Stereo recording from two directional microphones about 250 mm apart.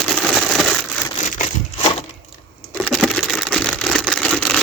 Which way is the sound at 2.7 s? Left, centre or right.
Centre.